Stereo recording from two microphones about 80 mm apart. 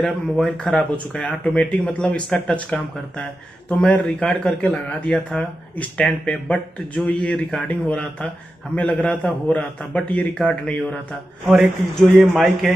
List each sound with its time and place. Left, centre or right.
0.0 s a man's voice: centre
7.1 s speech: centre
11.4 s a man's voice: centre